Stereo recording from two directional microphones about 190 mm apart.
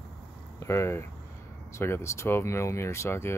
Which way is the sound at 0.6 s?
15° left (ahead or behind).